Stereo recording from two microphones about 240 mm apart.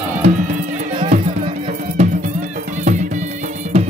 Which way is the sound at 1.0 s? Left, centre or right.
Right.